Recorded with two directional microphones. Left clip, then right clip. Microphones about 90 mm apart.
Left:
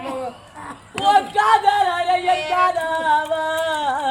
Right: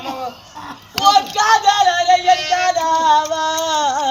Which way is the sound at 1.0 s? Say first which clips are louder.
Right 3 dB; 45° left (ahead or behind).